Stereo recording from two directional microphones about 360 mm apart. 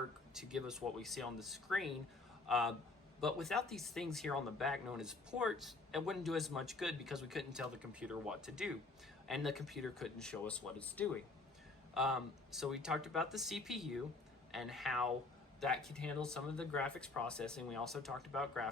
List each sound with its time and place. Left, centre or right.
0.3 s speech: centre